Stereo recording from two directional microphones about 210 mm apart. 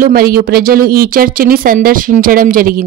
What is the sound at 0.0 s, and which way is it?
Speech, 45° right (ahead or behind).